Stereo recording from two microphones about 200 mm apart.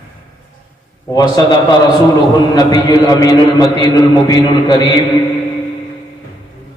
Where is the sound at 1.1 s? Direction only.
20° left (ahead or behind).